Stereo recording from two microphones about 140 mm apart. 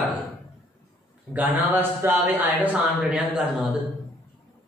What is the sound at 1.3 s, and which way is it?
A man's voice, 15° right (ahead or behind).